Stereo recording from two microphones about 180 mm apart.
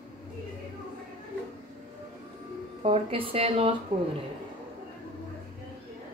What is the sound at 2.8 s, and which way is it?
Speech, 35° right (ahead or behind).